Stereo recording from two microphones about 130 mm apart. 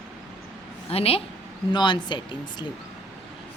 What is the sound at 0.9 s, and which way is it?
Speech, 50° left (ahead or behind).